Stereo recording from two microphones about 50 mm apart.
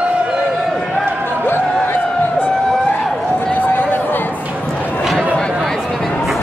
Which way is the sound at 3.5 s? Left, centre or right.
Left.